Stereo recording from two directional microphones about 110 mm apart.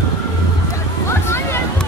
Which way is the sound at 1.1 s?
25° left (ahead or behind).